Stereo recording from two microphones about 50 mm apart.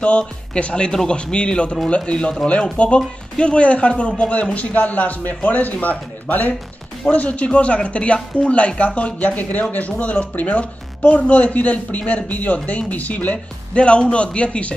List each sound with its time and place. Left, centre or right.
0.6 s speech: left